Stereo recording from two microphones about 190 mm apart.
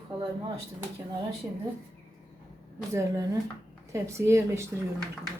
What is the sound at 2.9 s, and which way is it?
Speech, 20° right (ahead or behind).